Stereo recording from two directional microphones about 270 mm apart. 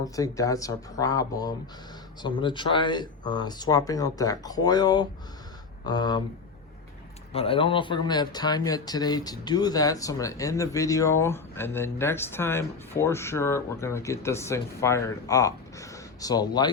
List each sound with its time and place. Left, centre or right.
0.0 s speech: centre
7.3 s speech: centre